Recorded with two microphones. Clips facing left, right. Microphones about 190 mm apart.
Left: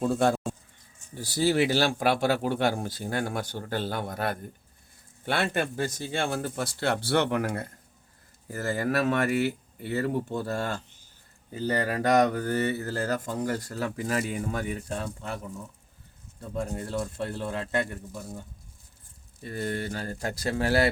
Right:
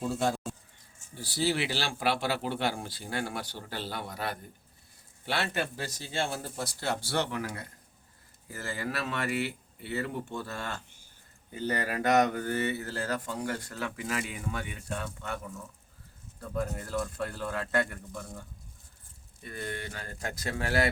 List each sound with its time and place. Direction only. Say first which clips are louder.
0.0 s pigeon: left 6 dB; 55° left (ahead or behind)
1.1 s speech: left 5 dB; 45° left (ahead or behind); by 18.0 s 20° left (ahead or behind)
19.4 s speech: left 7 dB; 35° left (ahead or behind)